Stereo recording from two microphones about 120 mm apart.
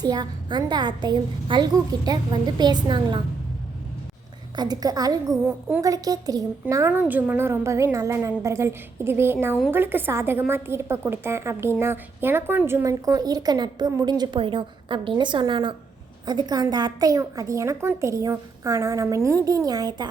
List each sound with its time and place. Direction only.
0.0 s a woman's voice: 35° right (ahead or behind)
4.5 s a woman's voice: 35° right (ahead or behind)
5.5 s a woman's voice: 15° right (ahead or behind)
5.8 s a woman's voice: 30° right (ahead or behind)
6.9 s a woman's voice: 15° right (ahead or behind); by 20.1 s 30° right (ahead or behind)